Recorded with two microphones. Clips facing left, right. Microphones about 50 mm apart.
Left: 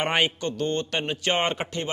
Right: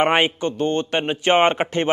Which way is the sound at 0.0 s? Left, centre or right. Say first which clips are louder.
Right 6 dB; right.